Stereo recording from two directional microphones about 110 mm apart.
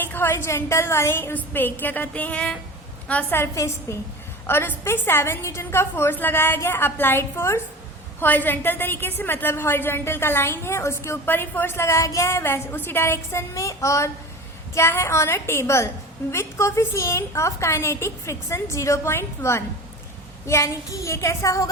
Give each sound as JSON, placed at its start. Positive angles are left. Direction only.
{"t": 0.0, "sound": "a woman's voice", "side_deg": 20}